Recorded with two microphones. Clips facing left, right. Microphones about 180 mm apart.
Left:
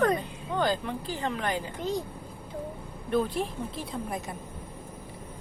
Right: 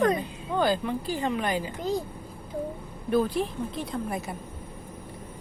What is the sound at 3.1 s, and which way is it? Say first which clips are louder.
Speech: right 3 dB; centre (ahead or behind).